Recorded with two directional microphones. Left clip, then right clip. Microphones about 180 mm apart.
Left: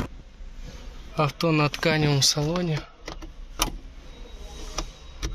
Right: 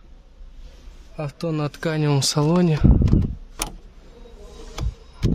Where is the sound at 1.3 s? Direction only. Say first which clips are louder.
Even; 15° right (ahead or behind).